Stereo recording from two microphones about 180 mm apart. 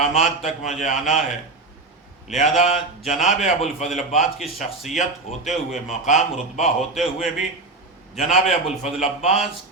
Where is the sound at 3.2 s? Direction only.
40° left (ahead or behind).